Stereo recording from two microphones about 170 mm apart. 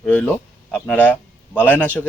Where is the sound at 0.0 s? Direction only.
10° left (ahead or behind).